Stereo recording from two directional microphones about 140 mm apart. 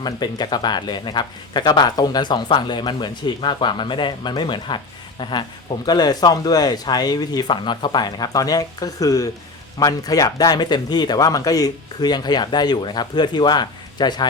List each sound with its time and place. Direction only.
0.0 s a man's voice: 30° left (ahead or behind)